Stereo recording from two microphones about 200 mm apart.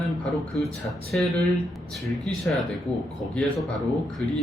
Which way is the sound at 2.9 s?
20° right (ahead or behind).